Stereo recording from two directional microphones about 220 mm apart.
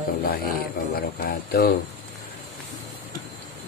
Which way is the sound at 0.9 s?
45° left (ahead or behind).